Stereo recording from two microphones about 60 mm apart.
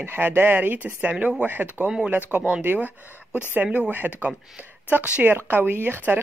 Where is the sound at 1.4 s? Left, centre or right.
Right.